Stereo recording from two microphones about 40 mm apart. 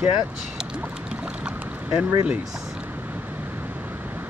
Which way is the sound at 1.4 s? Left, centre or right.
Right.